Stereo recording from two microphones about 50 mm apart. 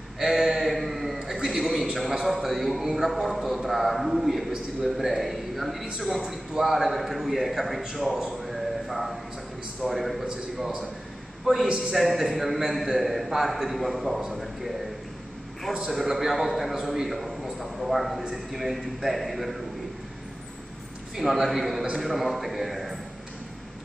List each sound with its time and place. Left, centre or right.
0.2 s a sound: centre
2.2 s a man's voice: centre
7.8 s a sound: centre
9.8 s a man's voice: centre
10.2 s a man's voice: centre
11.9 s a man's voice: centre
15.9 s a man's voice: centre
21.2 s a man's voice: centre